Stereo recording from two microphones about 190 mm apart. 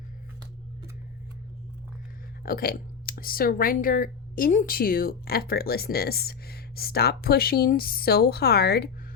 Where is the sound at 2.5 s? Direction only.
50° left (ahead or behind).